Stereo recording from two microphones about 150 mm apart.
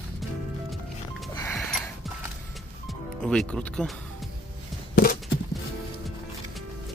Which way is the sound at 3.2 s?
5° left (ahead or behind).